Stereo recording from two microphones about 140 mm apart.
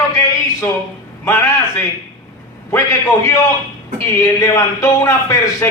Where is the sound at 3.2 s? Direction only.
25° left (ahead or behind).